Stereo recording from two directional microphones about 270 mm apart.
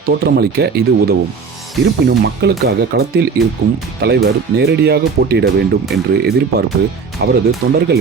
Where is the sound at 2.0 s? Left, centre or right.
Right.